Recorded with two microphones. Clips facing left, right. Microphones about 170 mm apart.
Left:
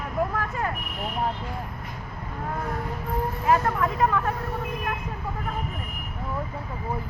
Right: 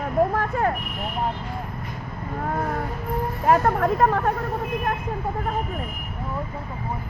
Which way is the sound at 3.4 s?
50° right (ahead or behind).